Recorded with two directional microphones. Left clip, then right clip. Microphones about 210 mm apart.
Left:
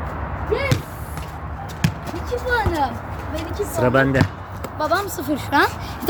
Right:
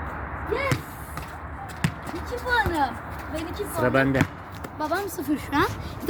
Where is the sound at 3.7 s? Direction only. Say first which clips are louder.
Left 5 dB; centre (ahead or behind).